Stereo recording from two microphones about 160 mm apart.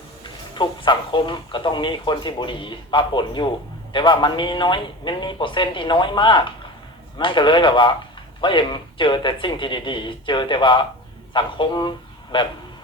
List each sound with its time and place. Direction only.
0.5 s a man's voice: 30° left (ahead or behind)